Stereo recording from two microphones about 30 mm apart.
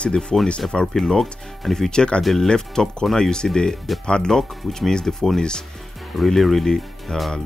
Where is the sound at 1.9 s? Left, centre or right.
Left.